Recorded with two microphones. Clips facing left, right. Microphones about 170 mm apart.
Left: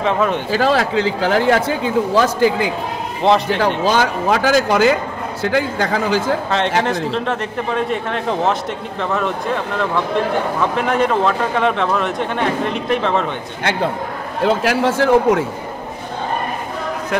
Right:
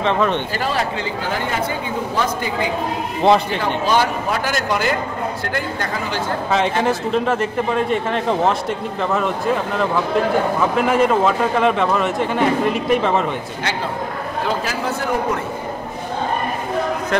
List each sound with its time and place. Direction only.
0.0 s speech: 5° left (ahead or behind)
0.6 s speech: 90° left
3.2 s speech: centre (ahead or behind)
3.5 s speech: 90° left
6.8 s speech: 5° right (ahead or behind)
14.4 s speech: 70° left (ahead or behind); by 15.4 s 90° left